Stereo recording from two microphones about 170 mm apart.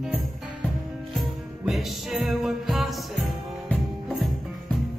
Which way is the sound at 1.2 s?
Centre (ahead or behind).